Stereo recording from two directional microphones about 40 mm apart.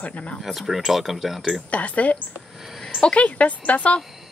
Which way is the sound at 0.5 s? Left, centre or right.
Centre.